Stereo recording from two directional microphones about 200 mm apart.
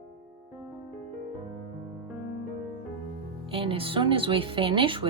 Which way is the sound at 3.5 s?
25° right (ahead or behind).